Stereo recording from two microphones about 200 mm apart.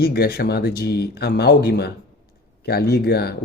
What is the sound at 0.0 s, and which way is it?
Speech, 50° left (ahead or behind).